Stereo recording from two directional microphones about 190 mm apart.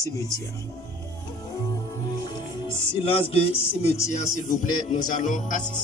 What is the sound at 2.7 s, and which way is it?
Music, 30° left (ahead or behind).